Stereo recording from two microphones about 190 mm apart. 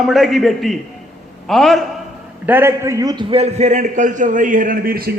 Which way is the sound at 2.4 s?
10° right (ahead or behind).